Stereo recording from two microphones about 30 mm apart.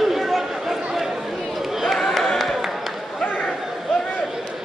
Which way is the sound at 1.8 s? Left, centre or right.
Centre.